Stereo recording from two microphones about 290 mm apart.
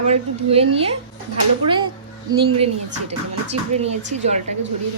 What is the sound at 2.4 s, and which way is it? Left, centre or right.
A woman's voice, centre.